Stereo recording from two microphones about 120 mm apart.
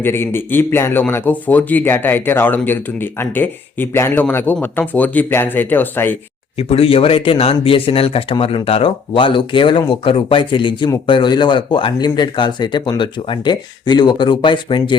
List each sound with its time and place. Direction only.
0.0 s a man's voice: 20° left (ahead or behind)
6.6 s speech: 55° left (ahead or behind)